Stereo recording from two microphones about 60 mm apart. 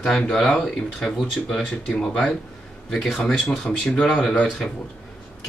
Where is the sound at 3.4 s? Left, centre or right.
Left.